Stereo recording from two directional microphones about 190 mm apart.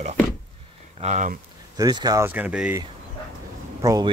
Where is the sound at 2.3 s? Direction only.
5° right (ahead or behind).